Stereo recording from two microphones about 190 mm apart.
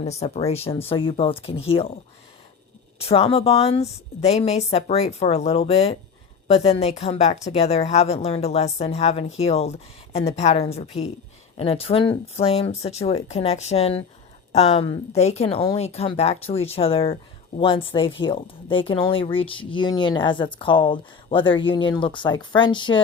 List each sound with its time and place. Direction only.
0.2 s a woman's voice: 35° left (ahead or behind)
3.0 s a woman's voice: 30° left (ahead or behind)